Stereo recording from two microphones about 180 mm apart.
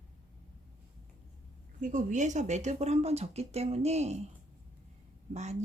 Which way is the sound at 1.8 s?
45° right (ahead or behind).